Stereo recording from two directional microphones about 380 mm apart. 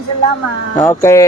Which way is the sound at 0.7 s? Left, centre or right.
Centre.